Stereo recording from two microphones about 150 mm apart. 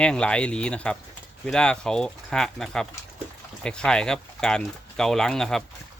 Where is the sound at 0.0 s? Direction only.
5° left (ahead or behind).